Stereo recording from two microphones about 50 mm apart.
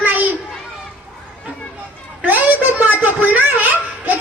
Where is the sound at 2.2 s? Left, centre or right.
Right.